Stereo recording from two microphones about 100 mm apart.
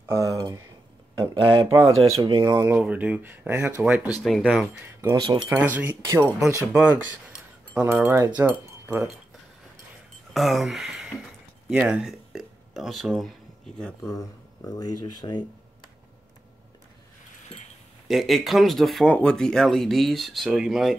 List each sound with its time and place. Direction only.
0.1 s speech: 35° right (ahead or behind)
1.2 s speech: 60° right (ahead or behind)
1.7 s speech: 35° right (ahead or behind)
2.1 s speech: 65° right (ahead or behind)
2.4 s speech: 40° right (ahead or behind)
2.8 s speech: 15° right (ahead or behind)
4.2 s speech: 5° left (ahead or behind)
5.1 s speech: 50° right (ahead or behind)
5.5 s speech: 15° right (ahead or behind)
6.0 s speech: 30° right (ahead or behind)
7.8 s speech: 20° right (ahead or behind)
10.3 s speech: centre (ahead or behind)
14.0 s speech: 30° left (ahead or behind)
18.0 s speech: centre (ahead or behind)